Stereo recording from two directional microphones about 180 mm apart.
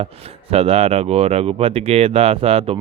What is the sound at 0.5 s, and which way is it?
Speech, 35° right (ahead or behind).